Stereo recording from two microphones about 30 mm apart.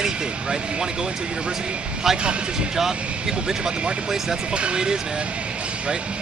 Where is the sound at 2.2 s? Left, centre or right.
Right.